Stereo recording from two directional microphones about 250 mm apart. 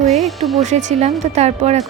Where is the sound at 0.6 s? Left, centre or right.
Right.